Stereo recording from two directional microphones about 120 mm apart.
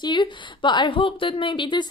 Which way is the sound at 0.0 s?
40° left (ahead or behind).